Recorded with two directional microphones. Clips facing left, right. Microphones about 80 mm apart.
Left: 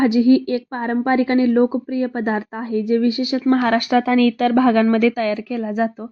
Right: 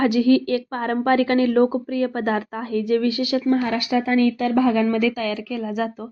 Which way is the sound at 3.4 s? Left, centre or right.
Left.